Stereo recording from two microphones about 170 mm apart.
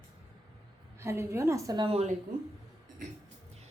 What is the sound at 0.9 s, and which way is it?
A woman's voice, 15° right (ahead or behind).